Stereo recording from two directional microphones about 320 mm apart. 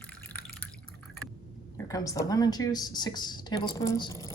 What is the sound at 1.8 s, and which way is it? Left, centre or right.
Speech, centre.